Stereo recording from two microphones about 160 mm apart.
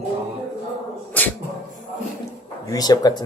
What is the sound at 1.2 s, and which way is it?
Dog, 10° left (ahead or behind).